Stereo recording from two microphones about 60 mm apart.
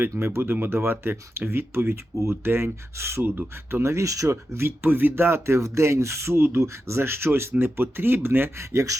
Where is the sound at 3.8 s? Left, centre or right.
Right.